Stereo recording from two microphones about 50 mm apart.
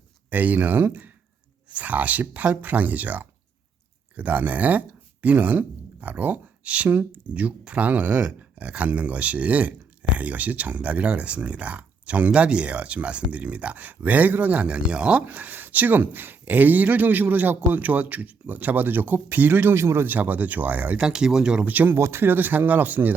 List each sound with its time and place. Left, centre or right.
0.3 s speech: right
1.7 s speech: right
14.8 s speech: right
15.3 s speech: right
19.7 s speech: right
20.1 s speech: right
21.0 s speech: centre
21.6 s speech: right
21.9 s speech: right